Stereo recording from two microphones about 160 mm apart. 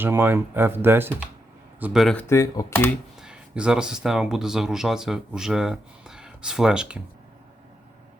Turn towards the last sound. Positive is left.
turn(degrees=-5)  # may be behind; listen again after turning